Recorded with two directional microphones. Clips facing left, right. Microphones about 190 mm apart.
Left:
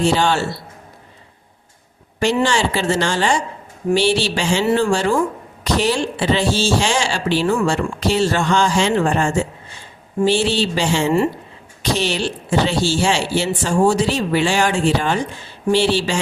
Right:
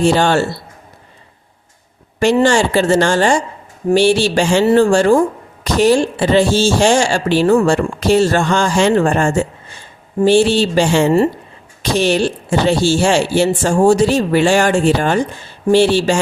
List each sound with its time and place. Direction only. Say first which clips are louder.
0.0 s speech: right 4 dB; 50° right (ahead or behind)
2.1 s speech: right 5 dB; 45° right (ahead or behind)